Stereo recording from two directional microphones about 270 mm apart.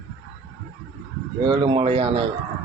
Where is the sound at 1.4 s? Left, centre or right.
Centre.